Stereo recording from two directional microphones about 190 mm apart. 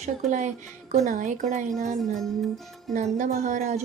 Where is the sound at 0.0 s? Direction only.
40° right (ahead or behind).